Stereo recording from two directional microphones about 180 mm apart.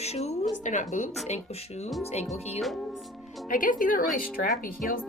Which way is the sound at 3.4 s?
50° left (ahead or behind).